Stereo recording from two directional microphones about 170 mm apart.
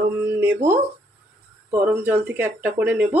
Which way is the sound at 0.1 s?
15° right (ahead or behind).